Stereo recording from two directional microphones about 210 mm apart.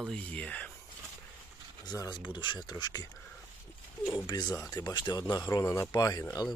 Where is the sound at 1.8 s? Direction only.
20° left (ahead or behind).